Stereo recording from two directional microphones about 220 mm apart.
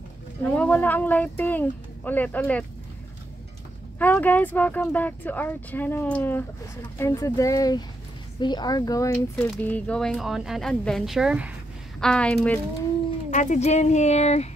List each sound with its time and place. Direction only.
0.5 s speech: 5° left (ahead or behind)
4.0 s speech: 5° left (ahead or behind)
13.3 s speech: 35° left (ahead or behind)